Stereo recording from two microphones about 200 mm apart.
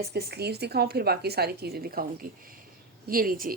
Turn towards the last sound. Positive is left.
turn(degrees=-45)  # may be behind; listen again after turning